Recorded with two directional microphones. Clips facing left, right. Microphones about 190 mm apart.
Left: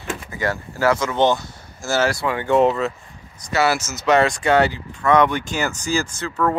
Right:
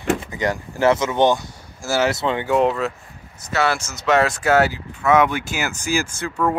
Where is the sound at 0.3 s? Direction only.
20° right (ahead or behind).